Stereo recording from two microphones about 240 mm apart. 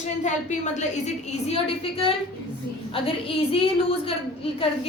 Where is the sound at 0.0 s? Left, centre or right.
Left.